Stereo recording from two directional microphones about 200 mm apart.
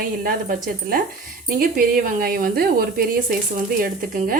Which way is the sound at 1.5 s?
45° right (ahead or behind).